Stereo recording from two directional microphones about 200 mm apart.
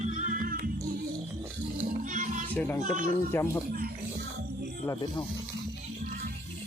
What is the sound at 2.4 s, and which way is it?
Speech, 10° left (ahead or behind).